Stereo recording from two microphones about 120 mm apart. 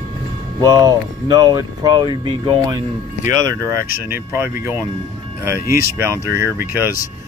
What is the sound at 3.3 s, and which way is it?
Speech, 30° right (ahead or behind).